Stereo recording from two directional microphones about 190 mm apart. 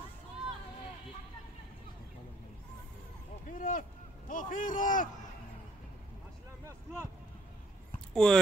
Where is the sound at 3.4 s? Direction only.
45° left (ahead or behind).